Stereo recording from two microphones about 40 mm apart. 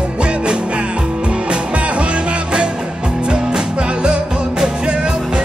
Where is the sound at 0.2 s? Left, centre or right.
Right.